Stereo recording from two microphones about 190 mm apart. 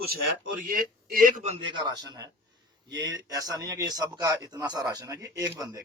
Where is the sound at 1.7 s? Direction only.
20° right (ahead or behind).